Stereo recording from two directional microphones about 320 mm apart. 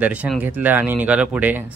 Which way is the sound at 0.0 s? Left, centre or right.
Centre.